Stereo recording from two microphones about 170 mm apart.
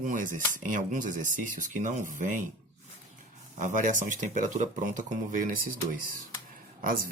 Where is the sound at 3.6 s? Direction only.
50° right (ahead or behind).